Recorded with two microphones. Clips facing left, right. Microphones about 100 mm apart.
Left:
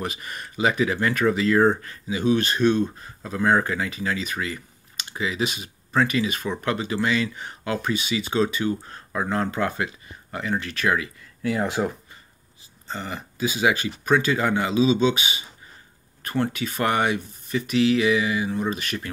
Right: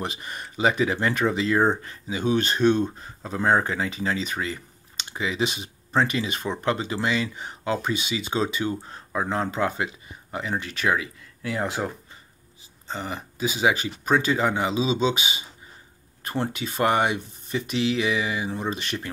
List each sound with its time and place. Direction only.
0.0 s speech: 25° right (ahead or behind)
11.4 s speech: centre (ahead or behind)
12.8 s speech: 20° right (ahead or behind)